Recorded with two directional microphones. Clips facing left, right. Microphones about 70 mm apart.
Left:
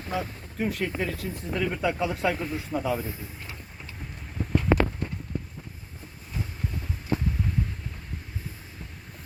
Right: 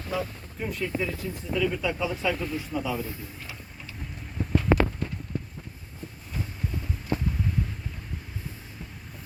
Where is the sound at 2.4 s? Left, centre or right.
Left.